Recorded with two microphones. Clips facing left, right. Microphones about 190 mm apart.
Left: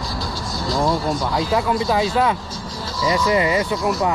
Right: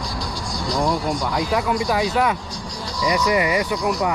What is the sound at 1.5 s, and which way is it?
Speech, 25° left (ahead or behind).